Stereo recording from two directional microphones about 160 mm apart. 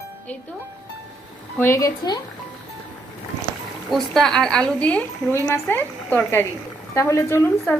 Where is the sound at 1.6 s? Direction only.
20° left (ahead or behind).